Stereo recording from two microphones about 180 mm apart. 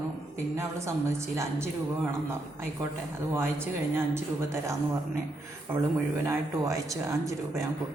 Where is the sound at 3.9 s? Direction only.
15° right (ahead or behind).